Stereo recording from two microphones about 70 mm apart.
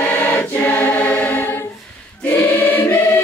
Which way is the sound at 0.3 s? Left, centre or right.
Left.